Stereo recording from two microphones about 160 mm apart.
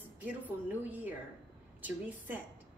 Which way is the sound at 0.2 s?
10° right (ahead or behind).